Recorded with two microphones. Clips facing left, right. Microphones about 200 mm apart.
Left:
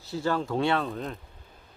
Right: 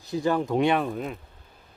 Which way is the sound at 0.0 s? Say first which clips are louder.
Right 3 dB; 15° right (ahead or behind).